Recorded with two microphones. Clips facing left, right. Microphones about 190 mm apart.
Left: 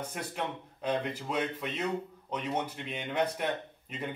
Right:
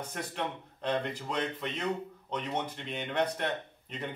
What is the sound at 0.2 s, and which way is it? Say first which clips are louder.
Speech: right 2 dB; 5° left (ahead or behind).